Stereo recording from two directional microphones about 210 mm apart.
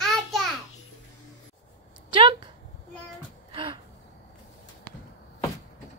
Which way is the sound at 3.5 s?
25° right (ahead or behind).